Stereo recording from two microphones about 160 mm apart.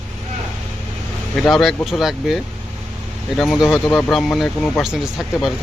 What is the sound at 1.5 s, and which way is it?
Speech, centre (ahead or behind).